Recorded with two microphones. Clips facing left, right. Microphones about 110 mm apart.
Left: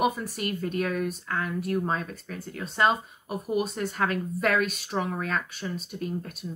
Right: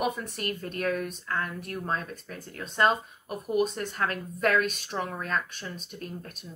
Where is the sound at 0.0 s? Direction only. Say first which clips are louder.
Left 3 dB; 5° left (ahead or behind).